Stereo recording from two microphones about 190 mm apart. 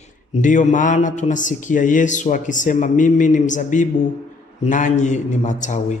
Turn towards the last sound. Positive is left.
turn(degrees=40)  # may be behind; listen again after turning